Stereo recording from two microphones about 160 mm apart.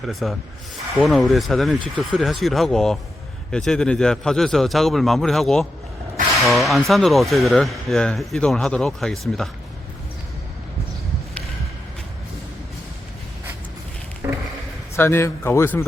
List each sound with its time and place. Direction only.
0.1 s speech: centre (ahead or behind)
14.2 s a sound: 20° right (ahead or behind)
14.9 s speech: 15° left (ahead or behind)